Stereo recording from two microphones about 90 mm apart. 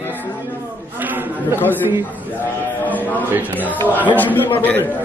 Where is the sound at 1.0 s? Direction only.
20° right (ahead or behind).